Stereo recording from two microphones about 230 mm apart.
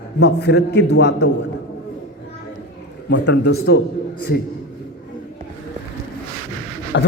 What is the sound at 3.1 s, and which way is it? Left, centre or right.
Speech, left.